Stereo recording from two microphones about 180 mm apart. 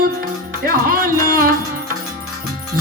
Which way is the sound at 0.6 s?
50° right (ahead or behind).